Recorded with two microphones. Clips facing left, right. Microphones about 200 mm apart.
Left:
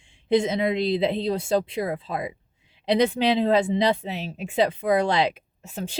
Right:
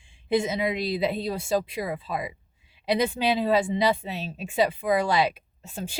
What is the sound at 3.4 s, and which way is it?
Speech, 20° left (ahead or behind).